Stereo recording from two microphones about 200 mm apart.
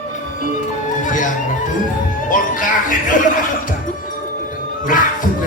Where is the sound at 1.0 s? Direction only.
40° left (ahead or behind).